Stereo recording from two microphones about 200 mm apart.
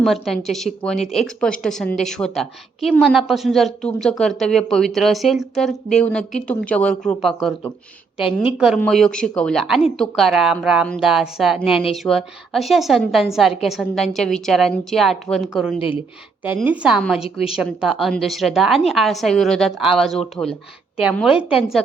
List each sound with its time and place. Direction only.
0.0 s a woman's voice: centre (ahead or behind)
8.2 s a woman's voice: 25° left (ahead or behind)
8.5 s a woman's voice: 5° right (ahead or behind)